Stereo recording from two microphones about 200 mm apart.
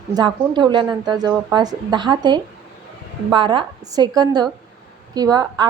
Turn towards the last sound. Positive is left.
turn(degrees=-20)  # may be behind; listen again after turning